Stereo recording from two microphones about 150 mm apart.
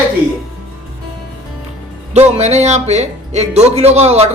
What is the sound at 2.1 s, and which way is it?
Speech, 45° right (ahead or behind).